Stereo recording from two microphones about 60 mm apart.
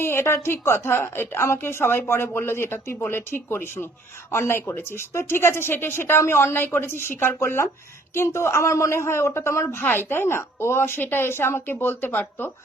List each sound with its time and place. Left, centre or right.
0.0 s a woman's voice: left
9.8 s a woman's voice: left